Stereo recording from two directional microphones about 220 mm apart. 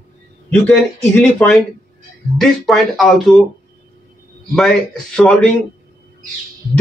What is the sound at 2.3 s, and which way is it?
Speech, centre (ahead or behind).